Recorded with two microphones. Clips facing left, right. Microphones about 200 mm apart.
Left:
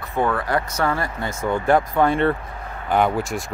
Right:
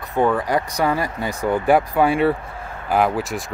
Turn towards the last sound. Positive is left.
turn(degrees=0)  # may be behind; listen again after turning